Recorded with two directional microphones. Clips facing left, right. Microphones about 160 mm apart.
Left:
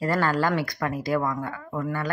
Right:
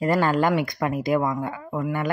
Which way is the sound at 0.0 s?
20° right (ahead or behind).